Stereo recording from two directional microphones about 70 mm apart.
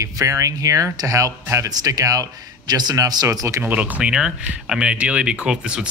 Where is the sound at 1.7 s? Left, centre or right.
Right.